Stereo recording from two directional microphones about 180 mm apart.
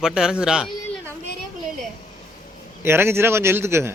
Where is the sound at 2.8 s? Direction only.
15° right (ahead or behind).